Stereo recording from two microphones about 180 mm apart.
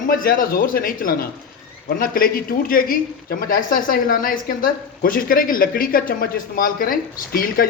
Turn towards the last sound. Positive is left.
turn(degrees=55)  # may be behind; listen again after turning